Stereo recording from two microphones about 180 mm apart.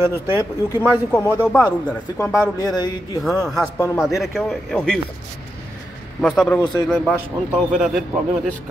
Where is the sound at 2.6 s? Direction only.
20° left (ahead or behind).